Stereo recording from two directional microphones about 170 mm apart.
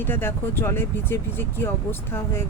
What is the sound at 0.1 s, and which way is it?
Speech, 15° left (ahead or behind).